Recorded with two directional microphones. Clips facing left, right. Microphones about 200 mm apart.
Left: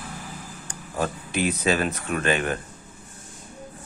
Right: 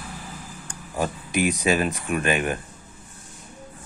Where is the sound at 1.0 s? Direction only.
15° right (ahead or behind).